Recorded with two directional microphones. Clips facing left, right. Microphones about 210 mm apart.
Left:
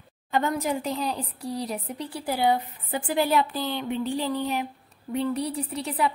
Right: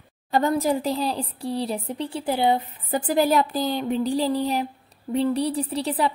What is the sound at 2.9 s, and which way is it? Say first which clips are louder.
Speech: right 4 dB; 40° right (ahead or behind).